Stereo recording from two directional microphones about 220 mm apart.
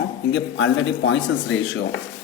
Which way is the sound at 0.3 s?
60° left (ahead or behind).